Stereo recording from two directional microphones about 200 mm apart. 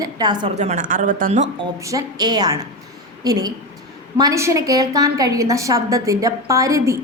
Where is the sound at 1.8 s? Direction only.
15° right (ahead or behind).